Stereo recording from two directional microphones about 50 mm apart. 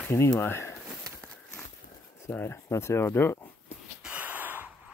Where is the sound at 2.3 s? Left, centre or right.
Left.